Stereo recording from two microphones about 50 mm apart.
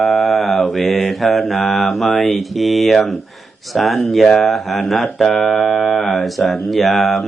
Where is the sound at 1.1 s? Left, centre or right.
Centre.